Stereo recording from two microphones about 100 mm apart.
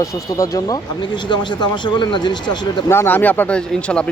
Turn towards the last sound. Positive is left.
turn(degrees=10)  # may be behind; listen again after turning